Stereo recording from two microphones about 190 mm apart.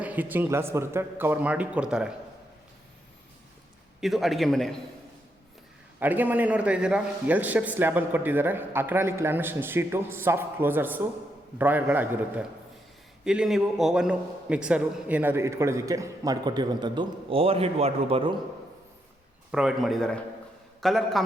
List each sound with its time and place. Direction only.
0.0 s a man's voice: 10° right (ahead or behind)
4.0 s a man's voice: centre (ahead or behind)
6.0 s a man's voice: 10° right (ahead or behind); by 18.3 s 30° right (ahead or behind)
19.5 s a man's voice: 5° right (ahead or behind)